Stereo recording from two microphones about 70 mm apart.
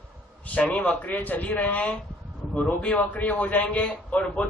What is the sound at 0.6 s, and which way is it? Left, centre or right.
A man's voice, centre.